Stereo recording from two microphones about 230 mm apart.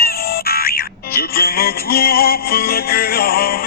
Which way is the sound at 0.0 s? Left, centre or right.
Left.